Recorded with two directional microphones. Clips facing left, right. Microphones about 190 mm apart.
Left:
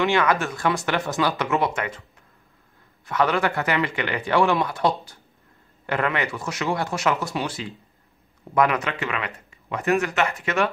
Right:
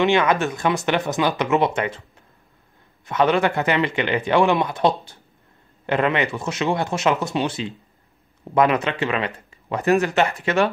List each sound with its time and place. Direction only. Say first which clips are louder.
0.0 s speech: right 3 dB; 20° right (ahead or behind)
3.1 s speech: right 3 dB; 20° right (ahead or behind)